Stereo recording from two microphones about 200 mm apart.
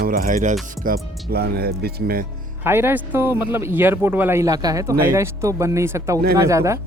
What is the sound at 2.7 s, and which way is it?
Speech, 10° right (ahead or behind).